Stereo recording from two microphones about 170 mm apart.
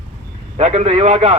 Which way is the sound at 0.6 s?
40° right (ahead or behind).